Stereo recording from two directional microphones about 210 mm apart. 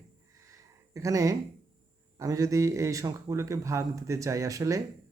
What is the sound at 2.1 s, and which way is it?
Speech, 15° right (ahead or behind).